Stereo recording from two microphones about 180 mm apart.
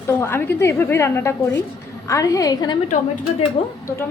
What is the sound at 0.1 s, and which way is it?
A woman's voice, 15° left (ahead or behind).